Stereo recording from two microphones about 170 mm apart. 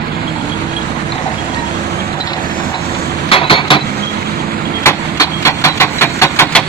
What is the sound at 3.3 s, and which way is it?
Cutlery, 30° left (ahead or behind).